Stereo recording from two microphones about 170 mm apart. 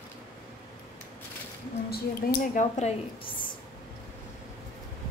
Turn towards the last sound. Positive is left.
turn(degrees=40)  # may be behind; listen again after turning